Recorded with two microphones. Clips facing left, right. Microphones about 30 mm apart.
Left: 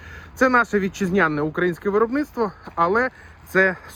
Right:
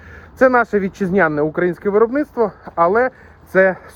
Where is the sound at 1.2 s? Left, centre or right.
Left.